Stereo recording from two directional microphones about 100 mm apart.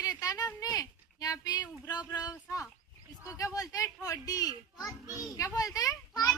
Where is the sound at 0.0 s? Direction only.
35° left (ahead or behind).